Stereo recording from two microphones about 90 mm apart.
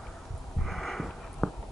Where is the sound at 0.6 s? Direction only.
Centre (ahead or behind).